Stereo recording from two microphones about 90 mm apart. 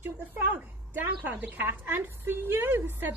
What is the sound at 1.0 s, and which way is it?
A woman's voice, 20° right (ahead or behind).